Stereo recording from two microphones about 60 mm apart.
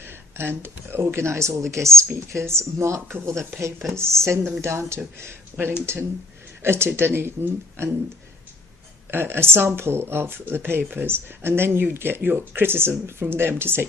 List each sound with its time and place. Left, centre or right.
0.0 s speech: right
9.0 s speech: right